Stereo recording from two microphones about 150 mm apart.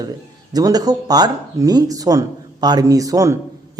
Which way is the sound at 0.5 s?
25° right (ahead or behind).